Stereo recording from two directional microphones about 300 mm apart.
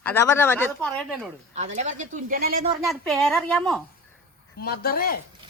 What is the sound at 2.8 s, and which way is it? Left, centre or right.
Speech, centre.